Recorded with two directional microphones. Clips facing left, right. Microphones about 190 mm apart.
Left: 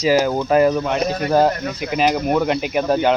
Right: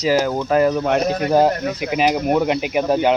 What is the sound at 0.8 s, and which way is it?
Speech, 65° right (ahead or behind).